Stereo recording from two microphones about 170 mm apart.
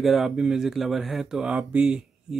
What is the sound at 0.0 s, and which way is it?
Speech, centre (ahead or behind).